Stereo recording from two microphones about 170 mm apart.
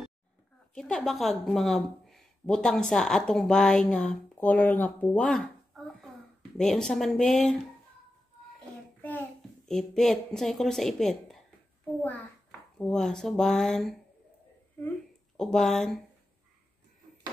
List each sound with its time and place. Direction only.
0.7 s a woman's voice: centre (ahead or behind)
6.6 s a woman's voice: centre (ahead or behind)
9.7 s a woman's voice: 5° left (ahead or behind)